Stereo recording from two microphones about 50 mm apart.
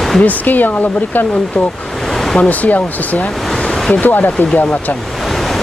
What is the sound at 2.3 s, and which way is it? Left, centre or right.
Speech, left.